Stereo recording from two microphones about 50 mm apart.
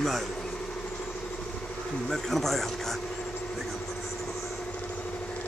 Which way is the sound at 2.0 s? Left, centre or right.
Centre.